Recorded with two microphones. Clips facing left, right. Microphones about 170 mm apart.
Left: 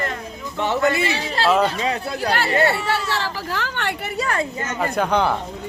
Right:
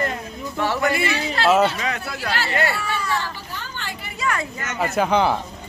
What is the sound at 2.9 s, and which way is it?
Speech, 90° left.